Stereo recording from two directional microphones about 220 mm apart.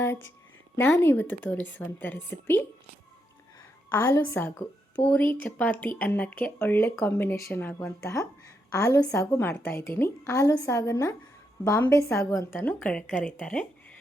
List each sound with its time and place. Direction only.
0.8 s a woman's voice: 10° left (ahead or behind)
3.9 s a woman's voice: 15° left (ahead or behind)